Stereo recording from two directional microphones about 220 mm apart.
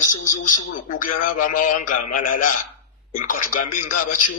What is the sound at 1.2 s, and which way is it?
Speech, 40° left (ahead or behind).